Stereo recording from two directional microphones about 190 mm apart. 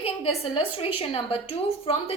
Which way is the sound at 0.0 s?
30° left (ahead or behind).